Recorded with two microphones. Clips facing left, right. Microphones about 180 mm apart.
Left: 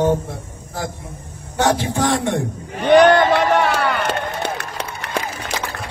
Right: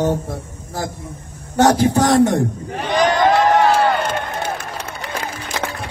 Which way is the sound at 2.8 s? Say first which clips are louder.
Left 5 dB; 65° left (ahead or behind).